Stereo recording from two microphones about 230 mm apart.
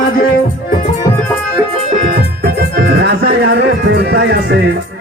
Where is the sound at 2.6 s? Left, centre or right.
Right.